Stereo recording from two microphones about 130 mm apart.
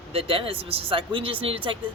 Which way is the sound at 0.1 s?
45° right (ahead or behind).